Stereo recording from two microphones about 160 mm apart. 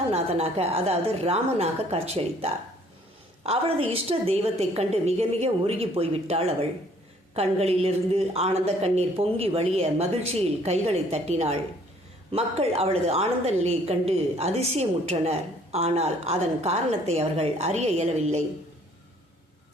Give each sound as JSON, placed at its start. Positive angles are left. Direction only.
{"t": 0.1, "sound": "a woman's voice", "side_deg": -40}